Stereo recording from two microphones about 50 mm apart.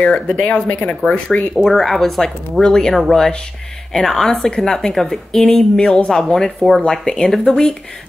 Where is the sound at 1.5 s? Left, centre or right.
Centre.